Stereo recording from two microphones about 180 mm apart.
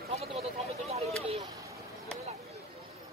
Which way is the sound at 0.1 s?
35° right (ahead or behind).